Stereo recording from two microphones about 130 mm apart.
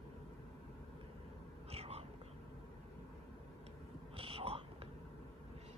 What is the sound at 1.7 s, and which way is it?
Whispering, 50° right (ahead or behind).